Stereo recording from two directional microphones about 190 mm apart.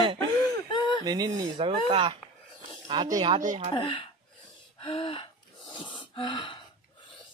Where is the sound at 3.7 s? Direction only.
25° left (ahead or behind).